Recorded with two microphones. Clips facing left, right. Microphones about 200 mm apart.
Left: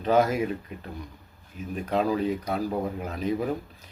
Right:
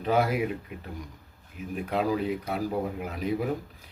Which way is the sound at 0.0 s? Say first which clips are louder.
Left 3 dB; 10° right (ahead or behind).